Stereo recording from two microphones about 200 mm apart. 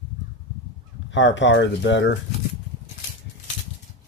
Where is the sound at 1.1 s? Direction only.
65° left (ahead or behind).